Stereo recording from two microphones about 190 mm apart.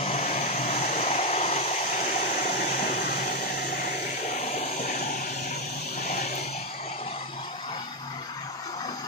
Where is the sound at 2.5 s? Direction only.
45° left (ahead or behind).